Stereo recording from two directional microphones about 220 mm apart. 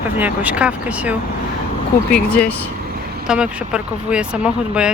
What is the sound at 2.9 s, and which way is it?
Vehicle, 45° right (ahead or behind).